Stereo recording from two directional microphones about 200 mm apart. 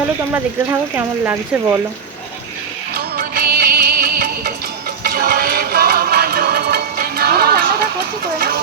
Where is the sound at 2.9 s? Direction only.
50° right (ahead or behind).